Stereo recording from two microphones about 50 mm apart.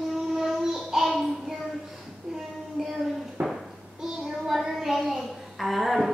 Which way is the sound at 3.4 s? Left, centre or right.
Right.